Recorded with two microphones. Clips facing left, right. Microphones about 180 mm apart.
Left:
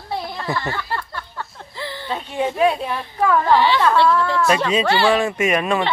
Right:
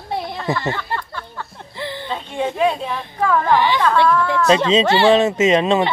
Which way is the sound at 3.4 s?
15° right (ahead or behind).